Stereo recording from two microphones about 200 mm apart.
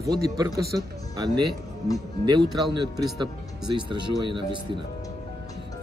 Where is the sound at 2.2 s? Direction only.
20° right (ahead or behind).